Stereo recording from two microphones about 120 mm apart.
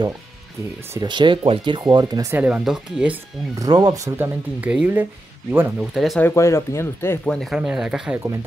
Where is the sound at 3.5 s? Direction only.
30° right (ahead or behind).